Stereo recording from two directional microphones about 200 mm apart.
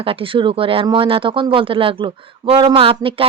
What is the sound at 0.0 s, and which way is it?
Speech, 25° right (ahead or behind).